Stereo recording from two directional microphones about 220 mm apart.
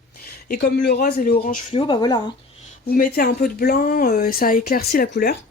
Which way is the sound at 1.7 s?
25° left (ahead or behind).